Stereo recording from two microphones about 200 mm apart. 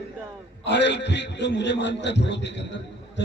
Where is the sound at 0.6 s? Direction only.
60° left (ahead or behind).